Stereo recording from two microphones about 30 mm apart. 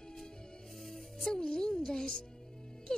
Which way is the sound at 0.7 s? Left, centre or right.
Centre.